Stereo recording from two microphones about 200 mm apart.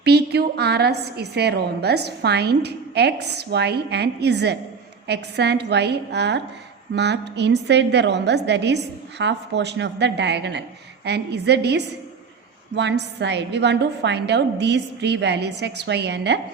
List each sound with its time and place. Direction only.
0.0 s a woman's voice: 55° right (ahead or behind)